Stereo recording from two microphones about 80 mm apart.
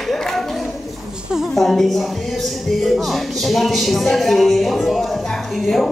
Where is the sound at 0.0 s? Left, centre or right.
Centre.